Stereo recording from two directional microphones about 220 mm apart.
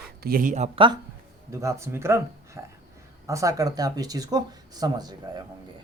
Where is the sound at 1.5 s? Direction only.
15° right (ahead or behind).